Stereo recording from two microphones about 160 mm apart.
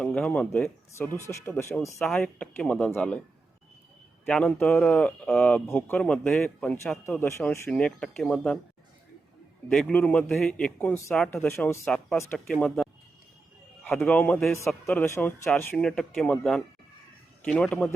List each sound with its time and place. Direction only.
0.0 s speech: 5° left (ahead or behind)
2.0 s speech: 5° left (ahead or behind)
4.3 s speech: 5° left (ahead or behind)
7.2 s speech: 15° left (ahead or behind)
9.6 s speech: 5° left (ahead or behind)
11.9 s speech: centre (ahead or behind)
12.1 s speech: 15° left (ahead or behind)
12.5 s speech: 5° left (ahead or behind)
13.9 s speech: 10° left (ahead or behind)